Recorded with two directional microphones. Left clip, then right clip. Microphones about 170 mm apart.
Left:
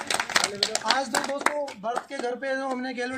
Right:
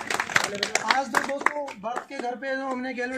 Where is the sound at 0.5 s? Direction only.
30° left (ahead or behind).